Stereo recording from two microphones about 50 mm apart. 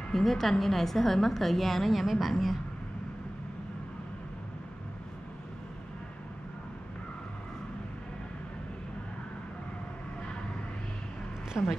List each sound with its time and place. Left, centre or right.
0.1 s a woman's voice: centre
11.6 s a woman's voice: left